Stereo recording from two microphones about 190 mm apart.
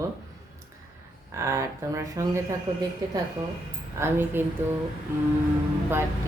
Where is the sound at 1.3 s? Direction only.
15° right (ahead or behind).